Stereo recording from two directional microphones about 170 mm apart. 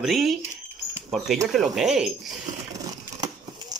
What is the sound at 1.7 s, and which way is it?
Speech, 5° right (ahead or behind).